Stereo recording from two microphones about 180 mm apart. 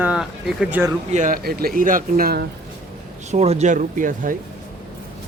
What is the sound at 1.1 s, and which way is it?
Speech, 50° right (ahead or behind).